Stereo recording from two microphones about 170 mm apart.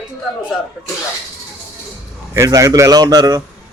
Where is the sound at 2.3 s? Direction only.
20° right (ahead or behind).